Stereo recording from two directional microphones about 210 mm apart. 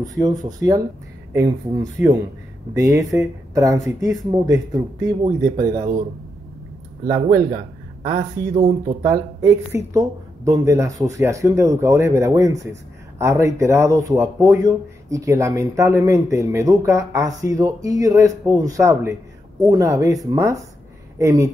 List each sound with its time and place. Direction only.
0.0 s speech: 15° right (ahead or behind)
8.1 s speech: 35° right (ahead or behind)
9.0 s speech: 15° right (ahead or behind)